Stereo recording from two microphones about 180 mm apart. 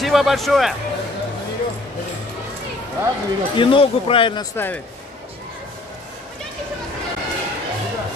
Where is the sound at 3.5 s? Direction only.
30° left (ahead or behind).